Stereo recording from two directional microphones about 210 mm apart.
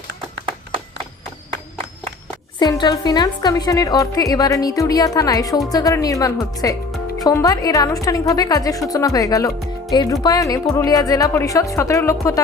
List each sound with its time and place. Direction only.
2.6 s a woman's voice: 20° left (ahead or behind)